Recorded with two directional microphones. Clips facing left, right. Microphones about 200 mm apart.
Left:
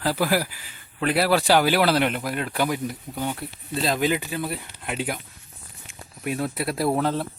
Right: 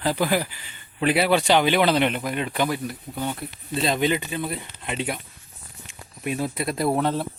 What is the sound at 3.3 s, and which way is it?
Speech, centre (ahead or behind).